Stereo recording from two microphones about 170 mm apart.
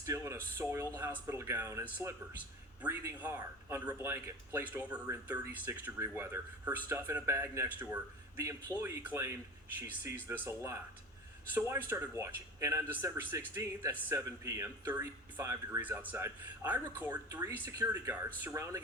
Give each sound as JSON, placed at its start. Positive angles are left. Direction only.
{"t": 0.0, "sound": "speech", "side_deg": -15}